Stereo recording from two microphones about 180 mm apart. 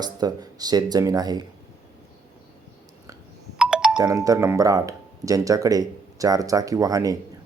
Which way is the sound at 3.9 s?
20° right (ahead or behind).